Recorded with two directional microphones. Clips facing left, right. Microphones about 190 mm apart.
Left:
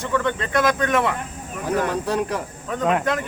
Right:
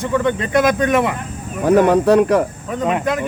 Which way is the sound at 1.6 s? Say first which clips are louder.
Right 11 dB; 65° right (ahead or behind).